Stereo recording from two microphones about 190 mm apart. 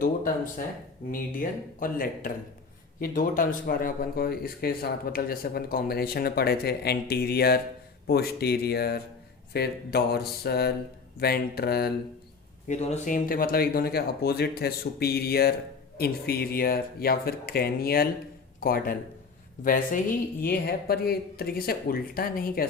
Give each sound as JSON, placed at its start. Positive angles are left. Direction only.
{"t": 1.1, "sound": "speech", "side_deg": 50}
{"t": 12.6, "sound": "speech", "side_deg": 35}